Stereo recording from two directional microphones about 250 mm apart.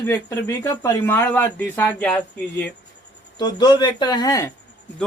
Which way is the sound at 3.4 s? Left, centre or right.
Centre.